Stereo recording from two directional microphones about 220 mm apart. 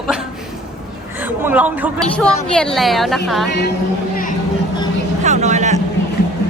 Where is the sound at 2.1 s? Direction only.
5° left (ahead or behind).